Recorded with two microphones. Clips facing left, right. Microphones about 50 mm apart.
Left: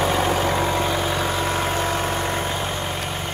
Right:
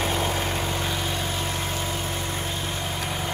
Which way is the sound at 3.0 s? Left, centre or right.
Centre.